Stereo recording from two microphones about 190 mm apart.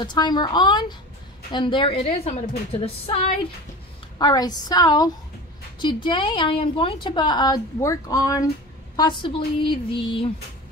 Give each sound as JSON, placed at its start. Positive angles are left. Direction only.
{"t": 0.0, "sound": "a woman's voice", "side_deg": 25}
{"t": 4.2, "sound": "a woman's voice", "side_deg": 20}